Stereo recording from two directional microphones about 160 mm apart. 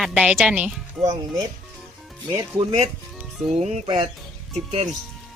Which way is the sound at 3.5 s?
45° right (ahead or behind).